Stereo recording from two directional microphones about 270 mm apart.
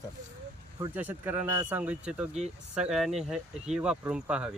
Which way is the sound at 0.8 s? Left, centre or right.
Centre.